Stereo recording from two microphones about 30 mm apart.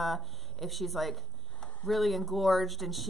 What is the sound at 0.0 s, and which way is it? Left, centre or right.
Speech, centre.